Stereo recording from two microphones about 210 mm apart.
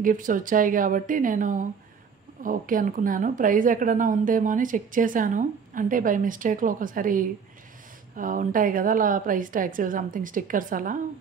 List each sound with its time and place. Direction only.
0.0 s a woman's voice: 40° right (ahead or behind)